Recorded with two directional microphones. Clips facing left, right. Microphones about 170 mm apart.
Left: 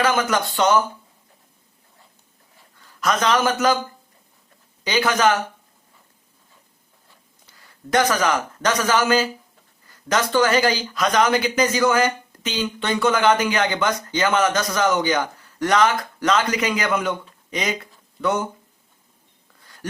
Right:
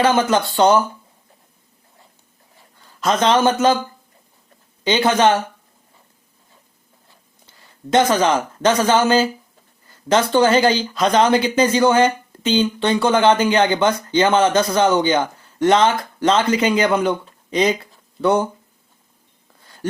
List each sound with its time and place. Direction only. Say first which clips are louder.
0.0 s speech: right 4 dB; 30° right (ahead or behind)
3.0 s speech: right 4 dB; 25° right (ahead or behind)
4.8 s speech: right 4 dB; 25° right (ahead or behind)
7.4 s speech: right 4 dB; 25° right (ahead or behind)
19.8 s a sound: right 7 dB; 25° right (ahead or behind)